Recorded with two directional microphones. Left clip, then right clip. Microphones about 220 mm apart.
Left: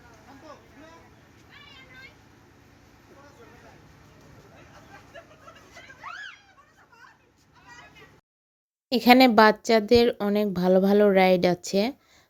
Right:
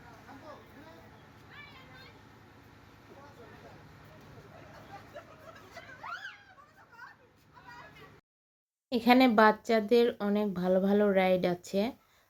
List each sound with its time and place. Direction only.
8.9 s speech: 40° left (ahead or behind)